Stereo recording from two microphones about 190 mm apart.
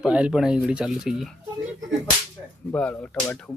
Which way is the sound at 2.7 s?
10° left (ahead or behind).